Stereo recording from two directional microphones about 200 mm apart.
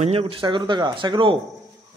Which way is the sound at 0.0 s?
30° right (ahead or behind).